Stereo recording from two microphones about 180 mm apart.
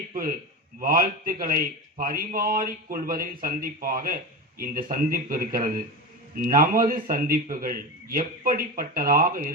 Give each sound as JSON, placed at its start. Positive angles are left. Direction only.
{"t": 0.1, "sound": "a man's voice", "side_deg": -50}